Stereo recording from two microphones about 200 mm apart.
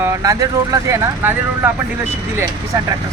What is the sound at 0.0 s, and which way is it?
Speech, 15° right (ahead or behind).